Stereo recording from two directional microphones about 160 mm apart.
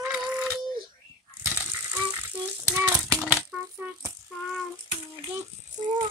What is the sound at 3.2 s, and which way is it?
Rattle, 10° right (ahead or behind).